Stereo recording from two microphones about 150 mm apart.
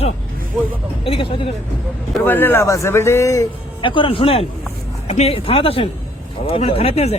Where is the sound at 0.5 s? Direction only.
5° right (ahead or behind).